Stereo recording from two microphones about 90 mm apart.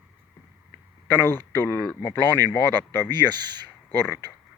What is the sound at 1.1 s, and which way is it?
Speech, 25° left (ahead or behind).